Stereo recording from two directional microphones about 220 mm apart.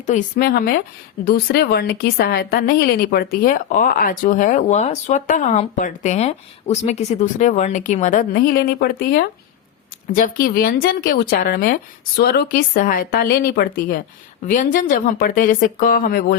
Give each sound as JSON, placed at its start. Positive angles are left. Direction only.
{"t": 0.0, "sound": "a woman's voice", "side_deg": 35}